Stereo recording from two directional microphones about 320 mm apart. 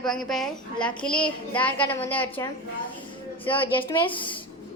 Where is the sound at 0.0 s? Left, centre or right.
Centre.